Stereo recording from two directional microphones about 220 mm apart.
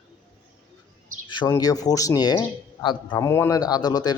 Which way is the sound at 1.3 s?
20° left (ahead or behind).